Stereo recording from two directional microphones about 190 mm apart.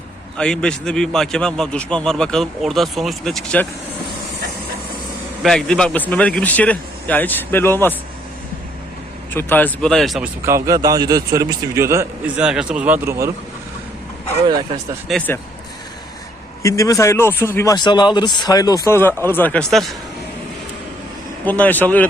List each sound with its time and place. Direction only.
0.3 s a man's voice: 5° left (ahead or behind)
5.4 s speech: 5° left (ahead or behind)
9.3 s speech: 10° left (ahead or behind)
10.4 s a man's voice: 15° right (ahead or behind)
12.4 s a man's voice: 5° right (ahead or behind)
15.1 s a man's voice: centre (ahead or behind)
16.6 s a man's voice: 15° left (ahead or behind); by 20.0 s centre (ahead or behind)
21.4 s speech: 10° left (ahead or behind)